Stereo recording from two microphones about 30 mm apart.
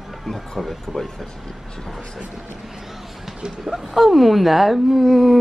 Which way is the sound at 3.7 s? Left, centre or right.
Centre.